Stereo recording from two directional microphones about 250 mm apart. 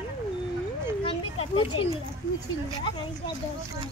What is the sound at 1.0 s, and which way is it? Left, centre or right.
Speech, left.